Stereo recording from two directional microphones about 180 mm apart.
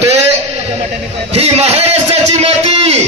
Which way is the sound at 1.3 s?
35° right (ahead or behind).